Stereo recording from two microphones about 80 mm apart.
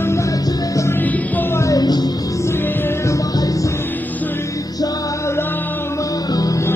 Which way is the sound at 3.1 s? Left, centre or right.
Left.